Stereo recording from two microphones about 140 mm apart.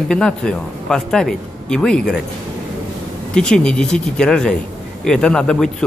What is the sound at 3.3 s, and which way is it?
Speech, 5° left (ahead or behind).